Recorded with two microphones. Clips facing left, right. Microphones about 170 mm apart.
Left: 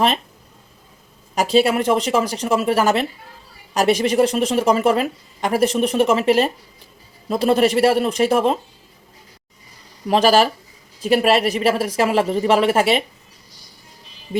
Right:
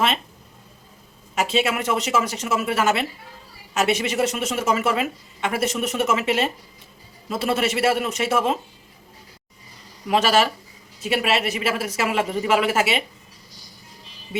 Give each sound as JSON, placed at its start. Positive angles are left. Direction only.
{"t": 1.4, "sound": "speech", "side_deg": 35}
{"t": 10.1, "sound": "speech", "side_deg": 35}